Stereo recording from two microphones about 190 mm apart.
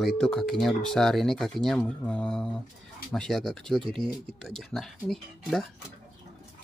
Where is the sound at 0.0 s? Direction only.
5° left (ahead or behind).